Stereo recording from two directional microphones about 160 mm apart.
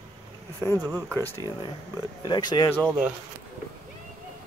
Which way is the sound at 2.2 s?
30° left (ahead or behind).